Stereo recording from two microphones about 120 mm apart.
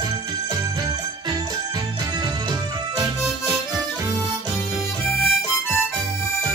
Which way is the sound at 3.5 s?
35° right (ahead or behind).